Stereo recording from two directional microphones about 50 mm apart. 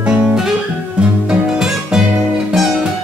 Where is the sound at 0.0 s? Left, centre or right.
Centre.